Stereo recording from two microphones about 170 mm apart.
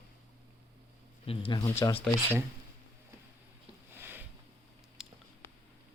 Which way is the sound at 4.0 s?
10° right (ahead or behind).